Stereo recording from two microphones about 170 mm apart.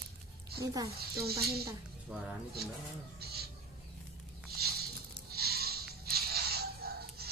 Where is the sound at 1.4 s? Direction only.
70° right (ahead or behind).